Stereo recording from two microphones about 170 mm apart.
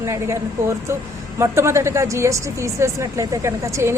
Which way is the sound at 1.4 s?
15° right (ahead or behind).